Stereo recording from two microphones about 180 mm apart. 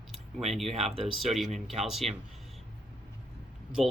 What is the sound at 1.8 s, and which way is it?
Speech, centre (ahead or behind).